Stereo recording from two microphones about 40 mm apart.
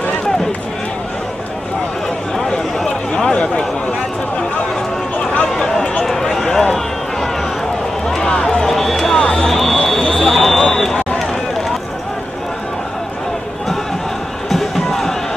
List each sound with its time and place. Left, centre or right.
2.8 s a sound: centre
6.0 s run: centre
8.3 s run: centre
8.6 s run: centre
9.3 s a sound: centre
10.7 s run: centre
14.5 s music: centre